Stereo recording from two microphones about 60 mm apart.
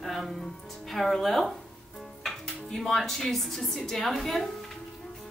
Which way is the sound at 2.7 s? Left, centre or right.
Centre.